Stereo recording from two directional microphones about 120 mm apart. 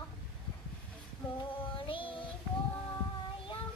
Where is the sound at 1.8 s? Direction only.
45° left (ahead or behind).